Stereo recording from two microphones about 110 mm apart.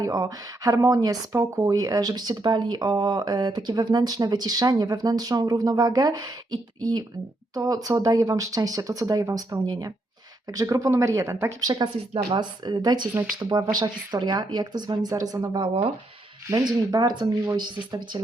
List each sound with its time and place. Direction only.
0.0 s speech: 35° right (ahead or behind)
12.1 s speech: 45° right (ahead or behind)